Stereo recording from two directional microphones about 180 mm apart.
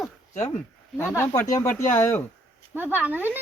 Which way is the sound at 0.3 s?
40° left (ahead or behind).